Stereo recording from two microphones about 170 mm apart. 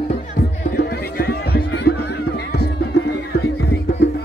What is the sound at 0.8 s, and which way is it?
Music, 65° left (ahead or behind).